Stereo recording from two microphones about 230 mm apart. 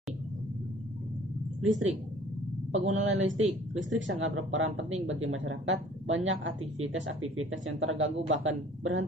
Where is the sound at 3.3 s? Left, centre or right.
Right.